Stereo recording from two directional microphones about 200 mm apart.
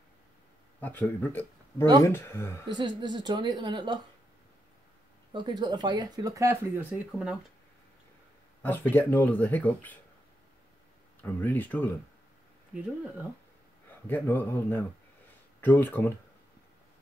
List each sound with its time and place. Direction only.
0.7 s speech: 10° left (ahead or behind)
2.7 s speech: 20° right (ahead or behind)
5.3 s speech: 20° right (ahead or behind); by 7.3 s 5° right (ahead or behind)
8.9 s speech: 10° left (ahead or behind)
11.2 s speech: 10° left (ahead or behind)
12.7 s speech: 5° right (ahead or behind)
14.0 s speech: 10° left (ahead or behind)